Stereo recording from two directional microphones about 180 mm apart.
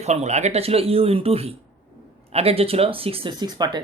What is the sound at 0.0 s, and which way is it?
A man's voice, 40° right (ahead or behind).